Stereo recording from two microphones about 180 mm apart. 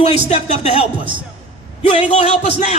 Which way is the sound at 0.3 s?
35° left (ahead or behind).